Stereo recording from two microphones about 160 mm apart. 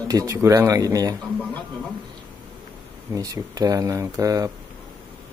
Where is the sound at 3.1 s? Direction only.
20° right (ahead or behind).